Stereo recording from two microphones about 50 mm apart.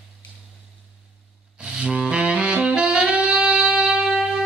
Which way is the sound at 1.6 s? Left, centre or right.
Centre.